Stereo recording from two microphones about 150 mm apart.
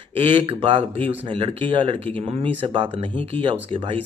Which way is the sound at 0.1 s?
35° right (ahead or behind).